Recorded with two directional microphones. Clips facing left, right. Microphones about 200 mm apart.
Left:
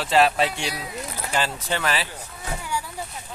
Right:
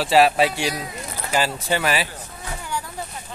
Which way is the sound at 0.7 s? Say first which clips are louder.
Right 1 dB; 5° left (ahead or behind).